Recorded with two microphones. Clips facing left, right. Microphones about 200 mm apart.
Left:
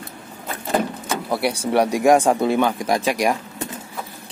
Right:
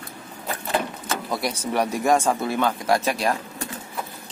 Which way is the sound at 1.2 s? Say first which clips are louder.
Left 6 dB; 10° left (ahead or behind).